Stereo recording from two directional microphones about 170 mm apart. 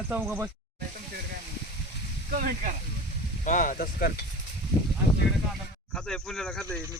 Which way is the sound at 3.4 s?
50° left (ahead or behind).